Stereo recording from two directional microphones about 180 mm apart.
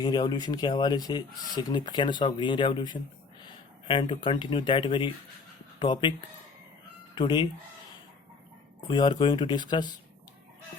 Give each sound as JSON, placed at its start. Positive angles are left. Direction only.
{"t": 0.0, "sound": "speech", "side_deg": 25}
{"t": 7.2, "sound": "speech", "side_deg": 25}
{"t": 8.9, "sound": "speech", "side_deg": 25}